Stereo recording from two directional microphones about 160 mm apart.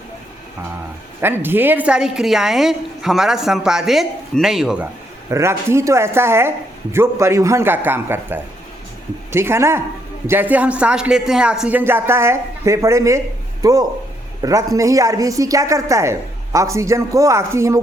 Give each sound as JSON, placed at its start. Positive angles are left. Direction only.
{"t": 1.2, "sound": "a woman's voice", "side_deg": -15}
{"t": 5.3, "sound": "a woman's voice", "side_deg": -15}